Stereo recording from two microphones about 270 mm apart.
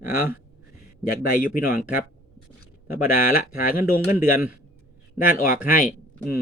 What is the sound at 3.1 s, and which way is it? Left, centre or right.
Speech, left.